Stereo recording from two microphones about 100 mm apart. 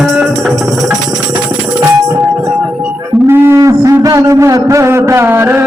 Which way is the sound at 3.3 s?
25° right (ahead or behind).